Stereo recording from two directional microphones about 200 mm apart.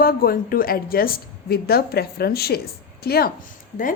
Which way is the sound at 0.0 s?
50° left (ahead or behind).